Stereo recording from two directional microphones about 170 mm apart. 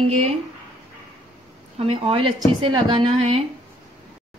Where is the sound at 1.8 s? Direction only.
35° right (ahead or behind).